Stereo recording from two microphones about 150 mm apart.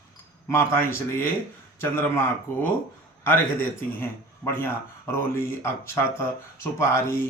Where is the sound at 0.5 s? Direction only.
15° left (ahead or behind).